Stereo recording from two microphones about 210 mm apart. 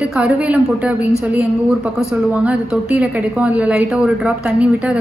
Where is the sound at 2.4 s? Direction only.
5° right (ahead or behind).